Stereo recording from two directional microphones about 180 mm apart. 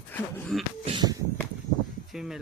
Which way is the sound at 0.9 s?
25° right (ahead or behind).